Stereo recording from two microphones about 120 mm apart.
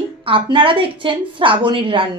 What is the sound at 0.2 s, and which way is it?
A woman's voice, 45° right (ahead or behind).